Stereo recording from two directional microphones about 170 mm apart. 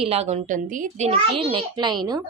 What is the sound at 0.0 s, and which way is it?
A child's voice, 40° right (ahead or behind).